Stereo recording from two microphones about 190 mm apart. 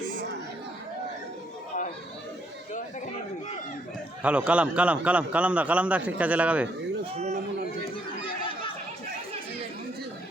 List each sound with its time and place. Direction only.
4.2 s a man's voice: 5° right (ahead or behind)
7.2 s a sound: 35° right (ahead or behind)
8.2 s chatter: 25° left (ahead or behind)